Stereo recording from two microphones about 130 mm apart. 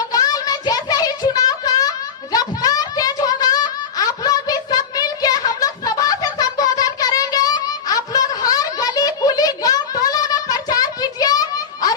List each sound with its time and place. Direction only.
0.1 s child singing: 30° left (ahead or behind)